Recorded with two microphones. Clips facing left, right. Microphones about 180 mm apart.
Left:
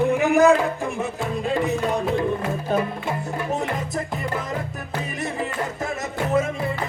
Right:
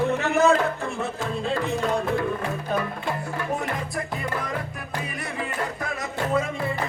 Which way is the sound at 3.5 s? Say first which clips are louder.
Left 3 dB; 20° left (ahead or behind).